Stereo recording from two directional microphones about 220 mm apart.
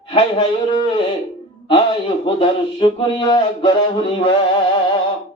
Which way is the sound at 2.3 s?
20° left (ahead or behind).